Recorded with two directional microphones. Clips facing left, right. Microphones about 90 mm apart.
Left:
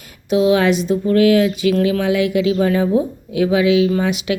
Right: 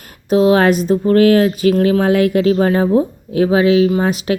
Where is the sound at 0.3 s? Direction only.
40° right (ahead or behind).